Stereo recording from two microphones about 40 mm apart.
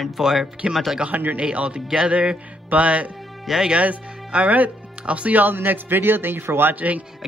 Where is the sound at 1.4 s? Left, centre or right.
Right.